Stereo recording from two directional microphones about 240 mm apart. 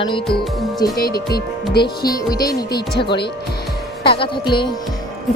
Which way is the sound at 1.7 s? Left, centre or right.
Centre.